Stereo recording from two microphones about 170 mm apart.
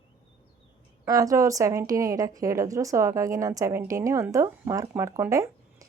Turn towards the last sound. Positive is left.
turn(degrees=-20)  # may be behind; listen again after turning